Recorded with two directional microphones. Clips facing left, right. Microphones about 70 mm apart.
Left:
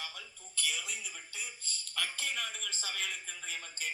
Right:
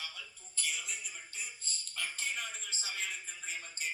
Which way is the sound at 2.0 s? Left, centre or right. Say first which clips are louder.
Left 2 dB; left.